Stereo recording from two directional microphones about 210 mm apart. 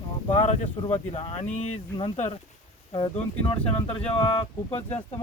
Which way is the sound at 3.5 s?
25° left (ahead or behind).